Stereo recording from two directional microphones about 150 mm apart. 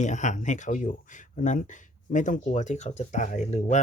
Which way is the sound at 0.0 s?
55° left (ahead or behind).